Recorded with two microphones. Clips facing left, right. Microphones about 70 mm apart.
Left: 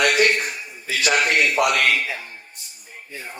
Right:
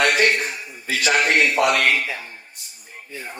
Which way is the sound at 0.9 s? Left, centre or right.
Right.